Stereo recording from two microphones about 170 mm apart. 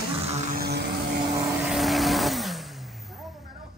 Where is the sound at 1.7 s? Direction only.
Centre (ahead or behind).